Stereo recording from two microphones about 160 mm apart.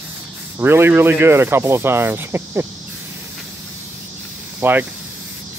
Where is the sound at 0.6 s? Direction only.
15° right (ahead or behind).